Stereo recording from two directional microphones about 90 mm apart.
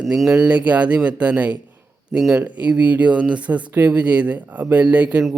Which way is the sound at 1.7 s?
20° right (ahead or behind).